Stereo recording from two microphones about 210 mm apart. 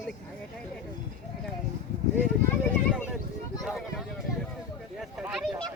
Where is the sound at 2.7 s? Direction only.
5° left (ahead or behind).